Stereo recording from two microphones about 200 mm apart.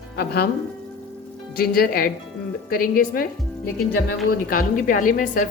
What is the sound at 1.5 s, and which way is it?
A woman's voice, 45° left (ahead or behind).